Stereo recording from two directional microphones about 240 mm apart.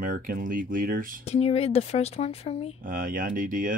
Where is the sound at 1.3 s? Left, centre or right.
Left.